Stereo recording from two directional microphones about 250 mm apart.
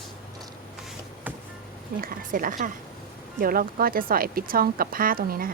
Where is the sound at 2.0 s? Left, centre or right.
Right.